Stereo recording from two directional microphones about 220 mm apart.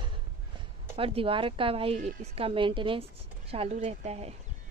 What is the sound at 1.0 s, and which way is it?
Speech, 25° right (ahead or behind).